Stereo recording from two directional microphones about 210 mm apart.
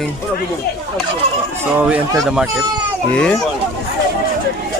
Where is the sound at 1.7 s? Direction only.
5° right (ahead or behind).